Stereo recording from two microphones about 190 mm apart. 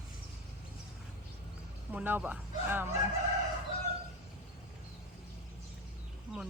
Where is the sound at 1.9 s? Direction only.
10° right (ahead or behind).